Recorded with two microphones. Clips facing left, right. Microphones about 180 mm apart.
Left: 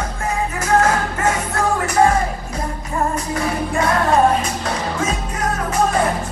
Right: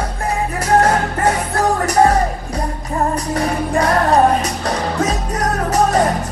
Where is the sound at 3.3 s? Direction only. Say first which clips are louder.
Right 3 dB; 40° right (ahead or behind).